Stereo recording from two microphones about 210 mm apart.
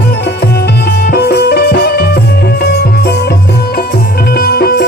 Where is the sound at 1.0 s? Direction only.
50° left (ahead or behind).